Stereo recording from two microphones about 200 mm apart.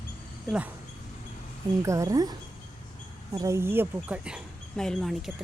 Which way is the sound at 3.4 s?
15° right (ahead or behind).